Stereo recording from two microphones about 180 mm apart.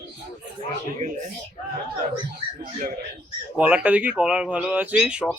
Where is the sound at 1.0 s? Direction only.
40° right (ahead or behind).